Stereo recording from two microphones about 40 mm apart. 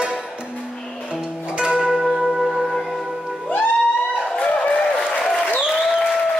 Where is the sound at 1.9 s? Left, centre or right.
Centre.